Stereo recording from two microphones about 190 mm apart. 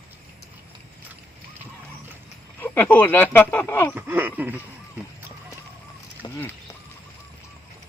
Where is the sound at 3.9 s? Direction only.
10° right (ahead or behind).